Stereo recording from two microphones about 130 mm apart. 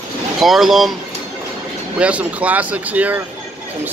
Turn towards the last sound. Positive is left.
turn(degrees=-10)  # may be behind; listen again after turning